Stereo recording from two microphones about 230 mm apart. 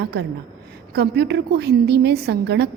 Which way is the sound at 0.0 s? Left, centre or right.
Right.